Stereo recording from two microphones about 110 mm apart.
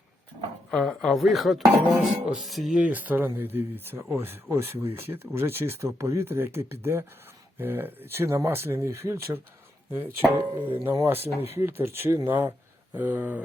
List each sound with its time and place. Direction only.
0.7 s speech: 5° left (ahead or behind)
2.8 s speech: 15° right (ahead or behind)
10.5 s speech: 20° right (ahead or behind)